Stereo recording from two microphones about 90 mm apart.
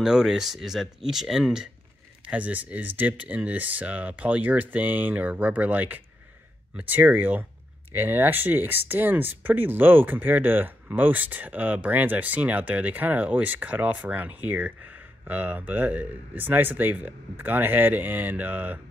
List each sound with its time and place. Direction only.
0.0 s speech: 5° right (ahead or behind)